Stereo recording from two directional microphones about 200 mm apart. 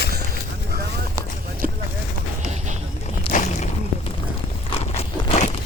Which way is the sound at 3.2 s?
35° left (ahead or behind).